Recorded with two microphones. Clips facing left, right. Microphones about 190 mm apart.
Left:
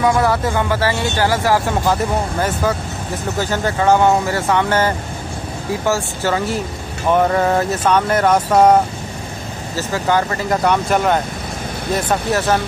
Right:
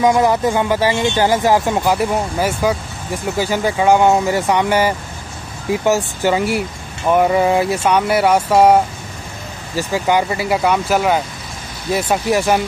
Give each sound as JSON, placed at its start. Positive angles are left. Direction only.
{"t": 0.0, "sound": "speech", "side_deg": -20}
{"t": 9.8, "sound": "speech", "side_deg": -15}